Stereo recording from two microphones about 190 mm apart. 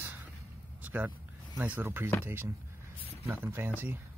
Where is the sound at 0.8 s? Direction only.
10° right (ahead or behind).